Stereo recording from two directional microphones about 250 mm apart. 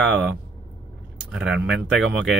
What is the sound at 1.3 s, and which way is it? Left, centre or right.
Speech, centre.